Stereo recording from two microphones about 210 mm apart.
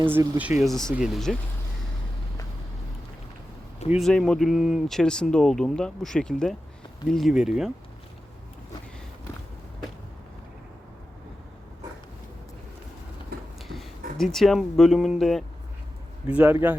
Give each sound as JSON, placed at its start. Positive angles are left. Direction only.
{"t": 0.0, "sound": "speech", "side_deg": -10}
{"t": 3.9, "sound": "speech", "side_deg": 0}
{"t": 13.3, "sound": "a sound", "side_deg": -50}
{"t": 14.2, "sound": "speech", "side_deg": 0}